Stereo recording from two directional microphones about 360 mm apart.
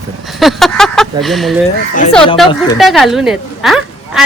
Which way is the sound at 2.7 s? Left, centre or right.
Centre.